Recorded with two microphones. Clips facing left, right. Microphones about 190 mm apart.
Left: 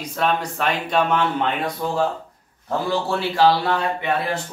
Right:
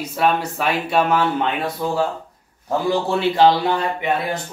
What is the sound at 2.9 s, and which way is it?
Speech, 20° right (ahead or behind).